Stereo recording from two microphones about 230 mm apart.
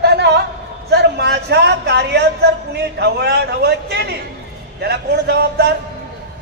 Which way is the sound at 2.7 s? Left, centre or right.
Right.